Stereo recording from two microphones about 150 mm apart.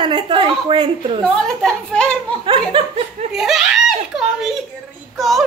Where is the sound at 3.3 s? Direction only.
5° right (ahead or behind).